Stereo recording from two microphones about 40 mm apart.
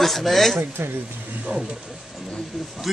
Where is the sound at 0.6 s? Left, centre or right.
Right.